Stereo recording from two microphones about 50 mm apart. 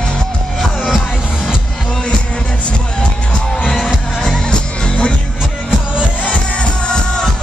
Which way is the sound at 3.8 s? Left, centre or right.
Centre.